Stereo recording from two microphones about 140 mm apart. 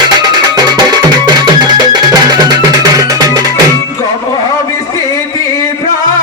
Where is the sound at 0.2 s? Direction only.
30° right (ahead or behind).